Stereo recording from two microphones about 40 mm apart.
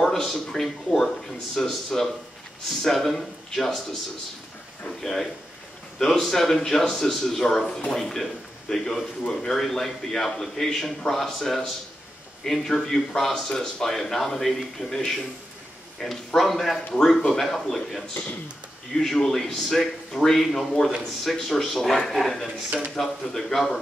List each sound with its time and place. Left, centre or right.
0.0 s speech: centre
5.0 s a man's voice: centre